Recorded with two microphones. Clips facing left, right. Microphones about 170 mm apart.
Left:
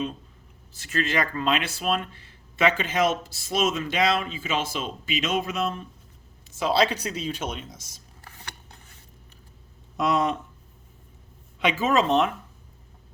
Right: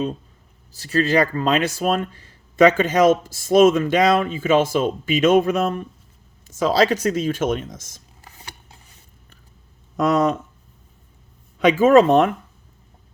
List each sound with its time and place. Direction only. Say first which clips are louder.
0.7 s speech: right 8 dB; 35° right (ahead or behind)
8.2 s a sound: right 1 dB; 15° right (ahead or behind)
10.0 s speech: right 5 dB; 45° right (ahead or behind)
11.6 s speech: right 10 dB; 50° right (ahead or behind)